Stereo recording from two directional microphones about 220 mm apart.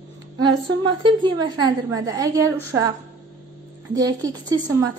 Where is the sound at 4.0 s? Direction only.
15° right (ahead or behind).